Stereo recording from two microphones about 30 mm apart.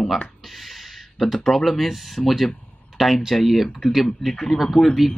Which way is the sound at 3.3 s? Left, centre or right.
Centre.